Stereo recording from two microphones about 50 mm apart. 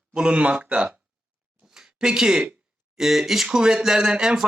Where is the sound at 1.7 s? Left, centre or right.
Centre.